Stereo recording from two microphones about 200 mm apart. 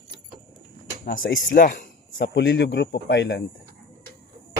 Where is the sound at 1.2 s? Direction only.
50° left (ahead or behind).